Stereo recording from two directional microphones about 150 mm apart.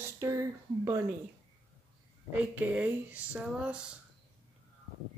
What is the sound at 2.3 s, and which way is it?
Speech, 10° right (ahead or behind).